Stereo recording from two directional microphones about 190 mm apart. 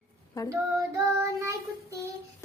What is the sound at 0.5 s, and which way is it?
Child singing, 15° right (ahead or behind).